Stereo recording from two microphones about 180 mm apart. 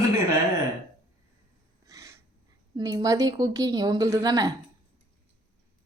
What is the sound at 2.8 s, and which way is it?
Speech, 20° right (ahead or behind).